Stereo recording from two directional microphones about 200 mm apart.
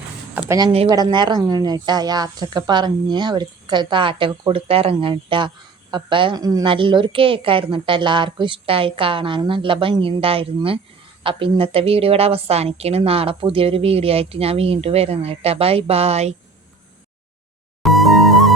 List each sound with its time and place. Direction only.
0.3 s a sound: 15° right (ahead or behind)
0.9 s a woman's voice: 20° right (ahead or behind)
17.8 s music: centre (ahead or behind)